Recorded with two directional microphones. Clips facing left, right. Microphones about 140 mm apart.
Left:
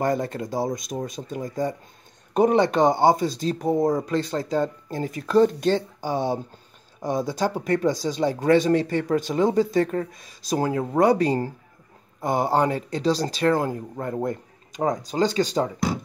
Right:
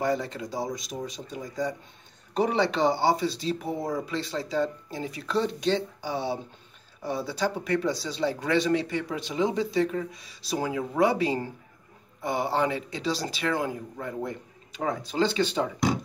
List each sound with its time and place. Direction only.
0.0 s speech: 50° left (ahead or behind)